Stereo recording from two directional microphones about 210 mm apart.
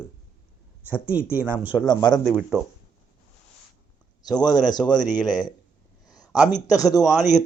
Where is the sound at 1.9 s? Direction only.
20° left (ahead or behind).